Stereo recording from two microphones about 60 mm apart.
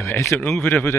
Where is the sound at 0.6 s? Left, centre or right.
Left.